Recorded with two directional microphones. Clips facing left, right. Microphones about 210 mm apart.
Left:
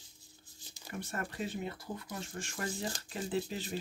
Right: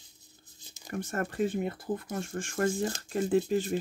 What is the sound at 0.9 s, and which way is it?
Speech, 45° right (ahead or behind).